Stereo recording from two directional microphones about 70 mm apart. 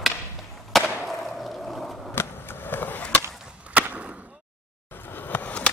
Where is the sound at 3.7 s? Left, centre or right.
Centre.